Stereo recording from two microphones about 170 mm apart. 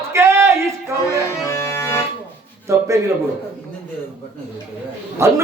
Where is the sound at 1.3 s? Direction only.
15° left (ahead or behind).